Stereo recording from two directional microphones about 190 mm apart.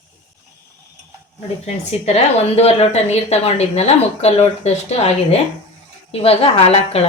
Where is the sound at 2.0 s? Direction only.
35° left (ahead or behind).